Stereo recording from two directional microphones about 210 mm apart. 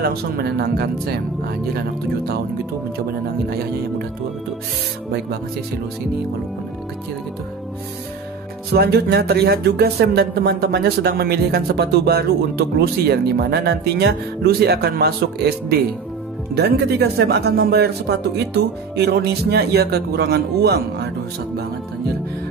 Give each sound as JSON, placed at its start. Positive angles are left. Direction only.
{"t": 0.0, "sound": "speech", "side_deg": -50}
{"t": 8.7, "sound": "speech", "side_deg": -50}